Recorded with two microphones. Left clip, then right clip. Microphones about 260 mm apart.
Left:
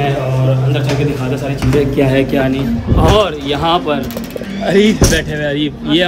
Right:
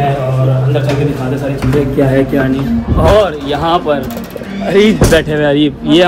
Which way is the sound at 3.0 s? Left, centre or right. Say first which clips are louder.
Right 3 dB; centre.